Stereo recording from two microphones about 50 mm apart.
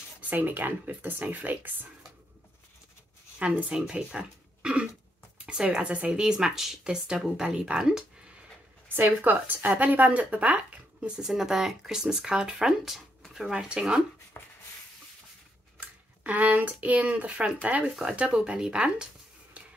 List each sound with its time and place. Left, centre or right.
0.3 s speech: right
3.3 s speech: right
6.1 s speech: centre
8.9 s speech: right
11.0 s speech: centre
14.3 s a sound: left
16.3 s speech: right